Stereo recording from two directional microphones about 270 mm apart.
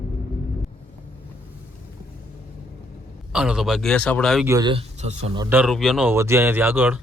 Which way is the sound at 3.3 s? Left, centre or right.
Centre.